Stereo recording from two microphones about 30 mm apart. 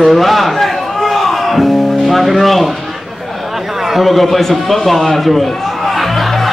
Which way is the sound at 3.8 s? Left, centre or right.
Centre.